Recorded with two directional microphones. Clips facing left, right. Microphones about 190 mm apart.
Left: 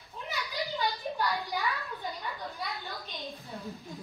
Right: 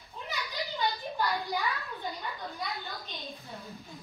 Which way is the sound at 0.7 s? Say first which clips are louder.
Right 1 dB; centre (ahead or behind).